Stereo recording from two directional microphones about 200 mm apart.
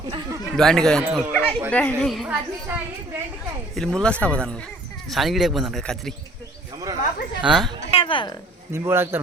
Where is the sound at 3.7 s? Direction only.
5° left (ahead or behind).